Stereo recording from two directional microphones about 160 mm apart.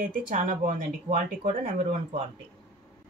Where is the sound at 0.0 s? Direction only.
55° right (ahead or behind).